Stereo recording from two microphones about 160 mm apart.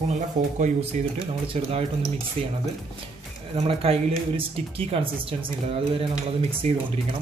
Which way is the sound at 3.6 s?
40° right (ahead or behind).